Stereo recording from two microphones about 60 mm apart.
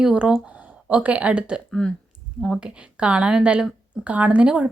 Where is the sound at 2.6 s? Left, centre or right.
Centre.